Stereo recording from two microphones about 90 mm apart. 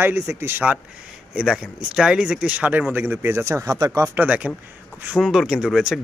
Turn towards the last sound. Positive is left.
turn(degrees=-5)  # may be behind; listen again after turning